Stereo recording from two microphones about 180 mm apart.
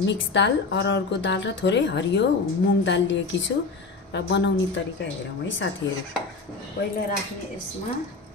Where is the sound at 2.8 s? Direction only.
90° left.